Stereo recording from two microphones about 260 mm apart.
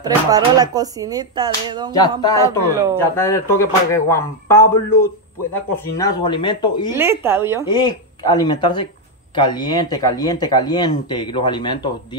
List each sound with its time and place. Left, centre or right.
0.0 s speech: centre
2.0 s speech: centre
2.7 s speech: centre
3.0 s speech: centre
7.0 s speech: centre
7.6 s speech: centre